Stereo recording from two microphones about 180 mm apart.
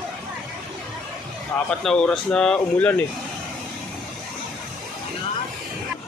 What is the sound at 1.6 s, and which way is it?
Speech, 5° left (ahead or behind).